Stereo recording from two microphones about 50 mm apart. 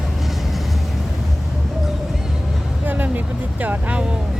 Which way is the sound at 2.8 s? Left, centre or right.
Right.